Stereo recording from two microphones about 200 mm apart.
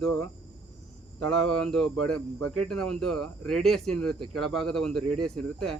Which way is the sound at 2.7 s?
5° left (ahead or behind).